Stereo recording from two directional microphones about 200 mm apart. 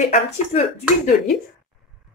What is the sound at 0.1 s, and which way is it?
Speech, 35° left (ahead or behind).